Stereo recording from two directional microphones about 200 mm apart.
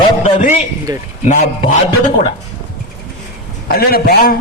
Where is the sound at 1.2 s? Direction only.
40° left (ahead or behind).